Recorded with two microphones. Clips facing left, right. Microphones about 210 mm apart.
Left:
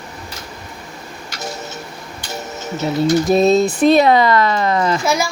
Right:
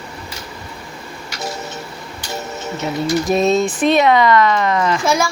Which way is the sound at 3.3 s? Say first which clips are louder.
Left 1 dB; 35° left (ahead or behind).